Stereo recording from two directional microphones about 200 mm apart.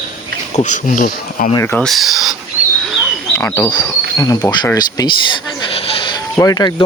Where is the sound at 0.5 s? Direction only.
40° left (ahead or behind).